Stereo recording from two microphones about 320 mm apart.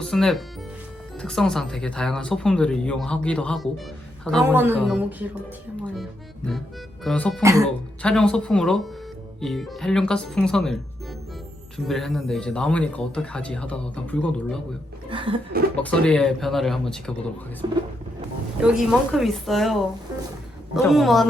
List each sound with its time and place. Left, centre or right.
0.0 s speech: centre
7.4 s speech: centre
8.0 s speech: centre
11.9 s speech: centre
15.1 s speech: centre
15.7 s speech: centre
17.6 s speech: centre
18.6 s speech: centre